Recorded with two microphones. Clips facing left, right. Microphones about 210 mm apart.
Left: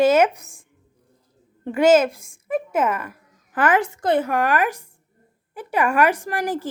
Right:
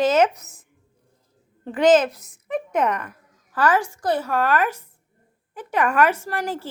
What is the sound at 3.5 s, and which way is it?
A woman's voice, 20° left (ahead or behind).